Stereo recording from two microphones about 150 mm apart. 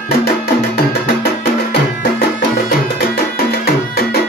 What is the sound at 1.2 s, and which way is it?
Music, 90° left.